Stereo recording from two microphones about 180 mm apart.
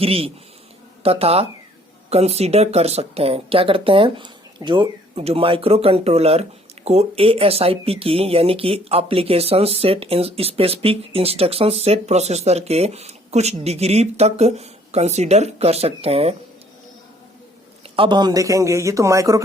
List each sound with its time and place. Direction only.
0.0 s speech: 30° right (ahead or behind)
17.9 s speech: 25° right (ahead or behind)